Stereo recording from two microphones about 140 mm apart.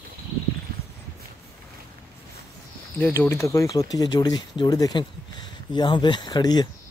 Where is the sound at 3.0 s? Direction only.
15° left (ahead or behind).